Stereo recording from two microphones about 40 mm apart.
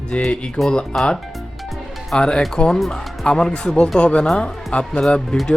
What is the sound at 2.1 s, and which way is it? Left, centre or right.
Speech, left.